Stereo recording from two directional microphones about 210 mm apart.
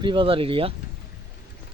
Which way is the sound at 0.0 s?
25° right (ahead or behind).